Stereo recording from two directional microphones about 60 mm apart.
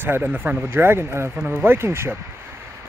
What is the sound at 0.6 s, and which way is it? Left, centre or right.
Speech, right.